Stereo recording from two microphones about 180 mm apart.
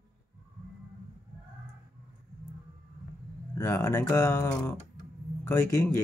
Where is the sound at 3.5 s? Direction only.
15° left (ahead or behind).